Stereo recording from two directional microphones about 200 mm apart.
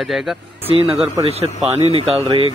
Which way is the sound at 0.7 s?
25° right (ahead or behind).